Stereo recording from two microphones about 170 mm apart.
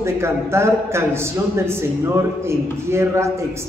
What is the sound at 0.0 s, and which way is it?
A man's voice, 15° right (ahead or behind).